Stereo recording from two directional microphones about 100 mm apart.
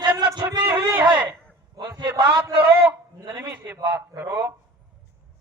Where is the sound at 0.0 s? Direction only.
45° right (ahead or behind).